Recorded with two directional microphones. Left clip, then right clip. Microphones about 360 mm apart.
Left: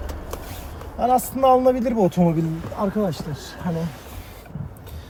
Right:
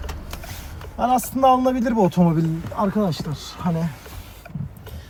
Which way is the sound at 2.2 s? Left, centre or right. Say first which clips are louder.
Even; centre.